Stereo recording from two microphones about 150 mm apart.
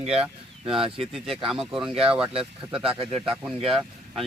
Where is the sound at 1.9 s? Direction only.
40° right (ahead or behind).